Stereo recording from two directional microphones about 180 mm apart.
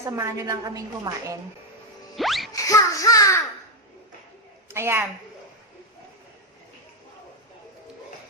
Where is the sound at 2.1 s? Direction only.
Centre (ahead or behind).